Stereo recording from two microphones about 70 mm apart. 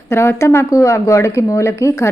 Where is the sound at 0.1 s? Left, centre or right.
Left.